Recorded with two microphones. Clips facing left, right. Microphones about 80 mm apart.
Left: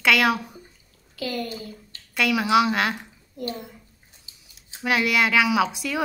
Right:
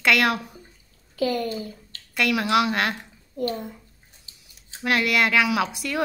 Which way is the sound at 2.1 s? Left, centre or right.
Centre.